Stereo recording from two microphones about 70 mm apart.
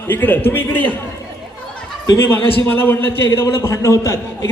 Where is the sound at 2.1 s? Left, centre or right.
Left.